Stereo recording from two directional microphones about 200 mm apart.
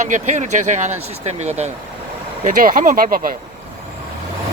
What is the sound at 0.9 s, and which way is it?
Speech, 90° right.